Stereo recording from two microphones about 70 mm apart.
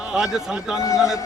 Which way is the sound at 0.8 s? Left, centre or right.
Left.